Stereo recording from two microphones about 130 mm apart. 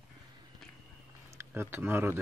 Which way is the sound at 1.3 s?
20° right (ahead or behind).